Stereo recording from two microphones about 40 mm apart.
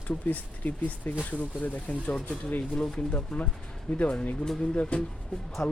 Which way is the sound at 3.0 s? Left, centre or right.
Left.